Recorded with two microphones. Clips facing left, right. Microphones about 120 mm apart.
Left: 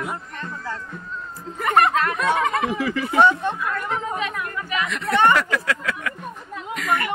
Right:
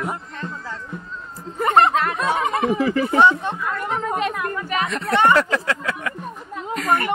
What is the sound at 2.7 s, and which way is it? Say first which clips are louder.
Speech: right 5 dB; 35° right (ahead or behind).